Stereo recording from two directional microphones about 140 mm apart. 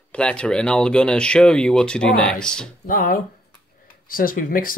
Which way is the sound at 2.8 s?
80° left.